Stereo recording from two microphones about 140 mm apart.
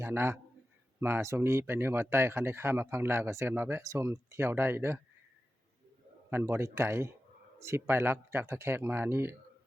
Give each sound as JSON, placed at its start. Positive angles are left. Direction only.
{"t": 0.0, "sound": "a man's voice", "side_deg": -15}
{"t": 6.3, "sound": "speech", "side_deg": -15}